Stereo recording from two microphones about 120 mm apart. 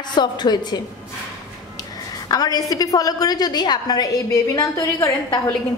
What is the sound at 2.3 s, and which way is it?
A woman's voice, 35° left (ahead or behind).